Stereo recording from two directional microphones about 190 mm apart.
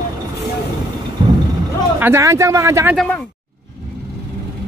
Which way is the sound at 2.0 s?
15° right (ahead or behind).